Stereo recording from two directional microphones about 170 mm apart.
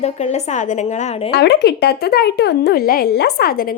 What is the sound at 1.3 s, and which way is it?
Speech, 80° left.